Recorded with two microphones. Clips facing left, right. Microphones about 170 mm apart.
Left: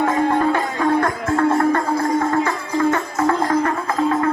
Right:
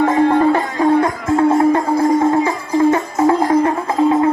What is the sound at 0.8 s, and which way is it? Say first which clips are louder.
Music: right 4 dB; 15° right (ahead or behind).